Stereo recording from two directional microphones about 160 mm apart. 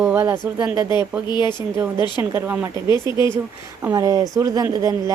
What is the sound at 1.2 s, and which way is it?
Speech, 25° left (ahead or behind).